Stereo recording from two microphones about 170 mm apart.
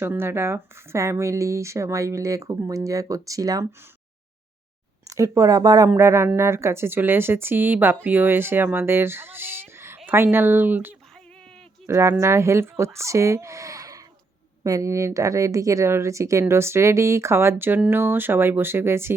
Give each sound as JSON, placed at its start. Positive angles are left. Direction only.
{"t": 0.0, "sound": "speech", "side_deg": -15}
{"t": 5.0, "sound": "speech", "side_deg": -20}